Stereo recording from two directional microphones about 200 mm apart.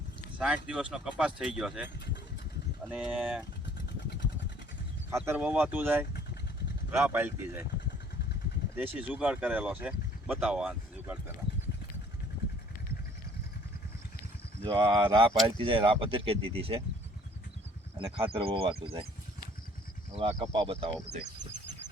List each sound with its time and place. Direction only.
0.3 s speech: 5° right (ahead or behind)
2.9 s speech: 5° right (ahead or behind)
5.1 s speech: 10° right (ahead or behind)
8.7 s speech: 10° right (ahead or behind)
14.6 s speech: 25° right (ahead or behind)
17.9 s speech: 25° right (ahead or behind)
20.1 s speech: 25° right (ahead or behind)